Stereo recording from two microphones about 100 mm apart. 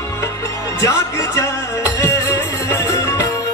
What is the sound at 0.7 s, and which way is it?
Speech, 30° left (ahead or behind).